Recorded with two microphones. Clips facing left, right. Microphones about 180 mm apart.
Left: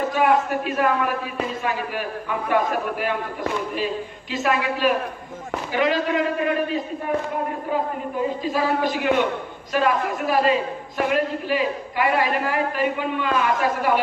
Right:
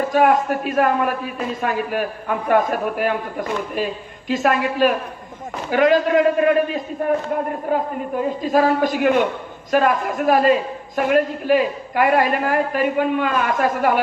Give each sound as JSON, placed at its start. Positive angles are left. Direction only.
{"t": 0.1, "sound": "a man's voice", "side_deg": -45}
{"t": 8.4, "sound": "a man's voice", "side_deg": -45}